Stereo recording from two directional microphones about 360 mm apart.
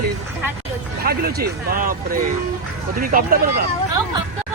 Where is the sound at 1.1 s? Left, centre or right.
Right.